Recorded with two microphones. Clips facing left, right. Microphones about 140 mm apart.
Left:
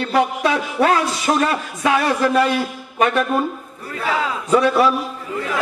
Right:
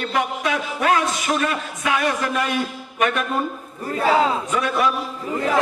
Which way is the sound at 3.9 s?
35° right (ahead or behind).